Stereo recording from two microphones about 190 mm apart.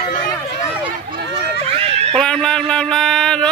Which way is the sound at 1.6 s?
30° right (ahead or behind).